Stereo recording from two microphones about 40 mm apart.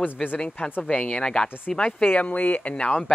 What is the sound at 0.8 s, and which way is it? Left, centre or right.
Speech, left.